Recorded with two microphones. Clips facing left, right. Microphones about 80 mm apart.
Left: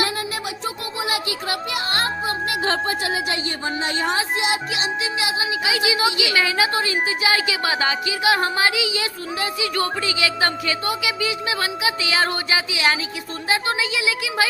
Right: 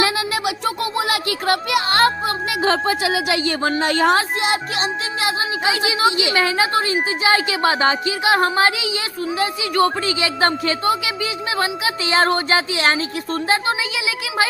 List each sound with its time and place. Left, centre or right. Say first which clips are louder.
0.0 s a sound: right 5 dB; right
3.0 s speech: right 4 dB; right
5.7 s a woman's voice: right 2 dB; right
9.4 s a woman's voice: right 6 dB; right
13.5 s a woman's voice: even; right